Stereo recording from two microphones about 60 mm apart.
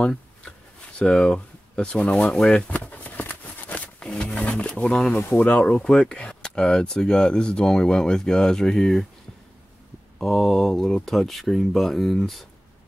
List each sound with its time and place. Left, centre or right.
0.0 s a sound: centre
2.3 s speech: centre
2.7 s a sound: left
4.0 s roaring cats: centre
5.4 s speech: left; by 9.0 s centre
10.1 s speech: centre